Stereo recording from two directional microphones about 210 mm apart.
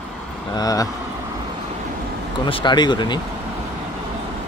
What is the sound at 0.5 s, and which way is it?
Speech, 15° left (ahead or behind).